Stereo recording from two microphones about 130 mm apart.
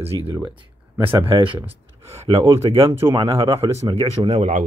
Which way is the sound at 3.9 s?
55° right (ahead or behind).